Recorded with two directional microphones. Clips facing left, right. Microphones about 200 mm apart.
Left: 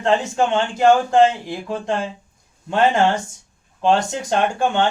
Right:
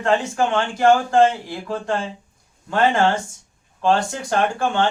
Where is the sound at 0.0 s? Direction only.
20° left (ahead or behind).